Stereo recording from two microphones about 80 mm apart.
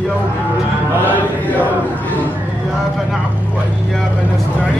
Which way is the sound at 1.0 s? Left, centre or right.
Left.